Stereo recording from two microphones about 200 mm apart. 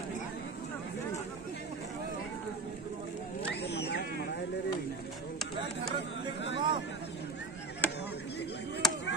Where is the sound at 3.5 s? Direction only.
55° left (ahead or behind).